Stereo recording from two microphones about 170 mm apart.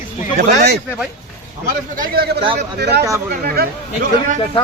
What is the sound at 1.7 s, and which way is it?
Speech, 60° right (ahead or behind).